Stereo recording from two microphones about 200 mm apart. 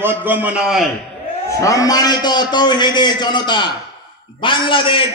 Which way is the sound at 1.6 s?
15° left (ahead or behind).